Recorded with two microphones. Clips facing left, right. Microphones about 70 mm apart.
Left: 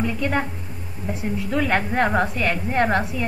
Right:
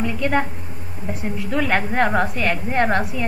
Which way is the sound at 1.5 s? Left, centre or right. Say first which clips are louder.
Right 1 dB; centre.